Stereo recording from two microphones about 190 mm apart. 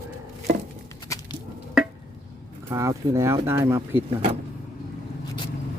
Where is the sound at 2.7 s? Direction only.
15° right (ahead or behind).